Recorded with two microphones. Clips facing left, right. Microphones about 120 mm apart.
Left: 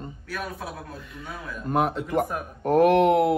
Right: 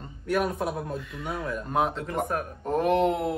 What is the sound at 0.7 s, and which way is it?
Speech, 25° right (ahead or behind).